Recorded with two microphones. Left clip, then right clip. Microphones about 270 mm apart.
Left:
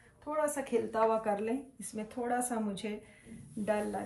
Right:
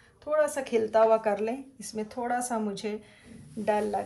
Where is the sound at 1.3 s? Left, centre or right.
Right.